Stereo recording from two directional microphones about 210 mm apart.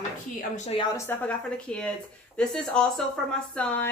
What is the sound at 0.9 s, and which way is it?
Speech, 10° left (ahead or behind).